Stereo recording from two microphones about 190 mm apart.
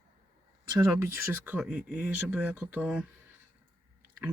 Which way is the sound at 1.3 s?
10° right (ahead or behind).